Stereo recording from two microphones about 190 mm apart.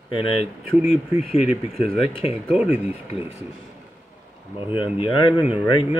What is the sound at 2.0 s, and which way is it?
Speech, 30° left (ahead or behind).